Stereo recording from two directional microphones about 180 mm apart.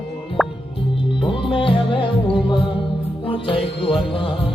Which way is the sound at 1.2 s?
30° left (ahead or behind).